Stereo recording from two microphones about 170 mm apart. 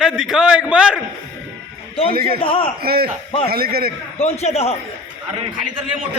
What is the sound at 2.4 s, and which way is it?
Speech, 30° left (ahead or behind).